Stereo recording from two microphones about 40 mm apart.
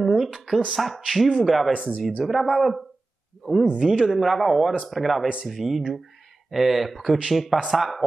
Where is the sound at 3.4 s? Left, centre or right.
Centre.